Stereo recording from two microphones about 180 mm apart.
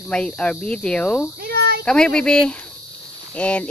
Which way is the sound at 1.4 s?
60° right (ahead or behind).